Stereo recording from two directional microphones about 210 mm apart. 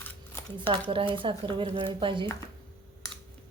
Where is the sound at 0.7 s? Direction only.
25° right (ahead or behind).